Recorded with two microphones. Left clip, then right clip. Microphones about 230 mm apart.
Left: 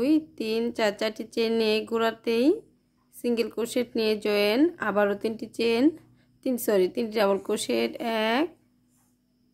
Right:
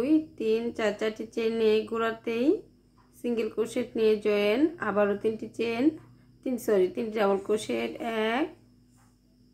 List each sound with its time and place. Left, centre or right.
0.0 s speech: left